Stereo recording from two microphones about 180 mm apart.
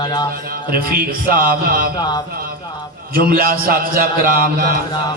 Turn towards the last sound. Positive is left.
turn(degrees=-55)  # may be behind; listen again after turning